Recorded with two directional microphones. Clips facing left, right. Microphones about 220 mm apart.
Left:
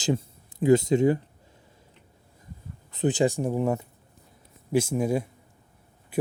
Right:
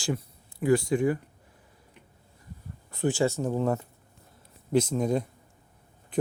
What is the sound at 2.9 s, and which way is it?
A man's voice, 20° left (ahead or behind).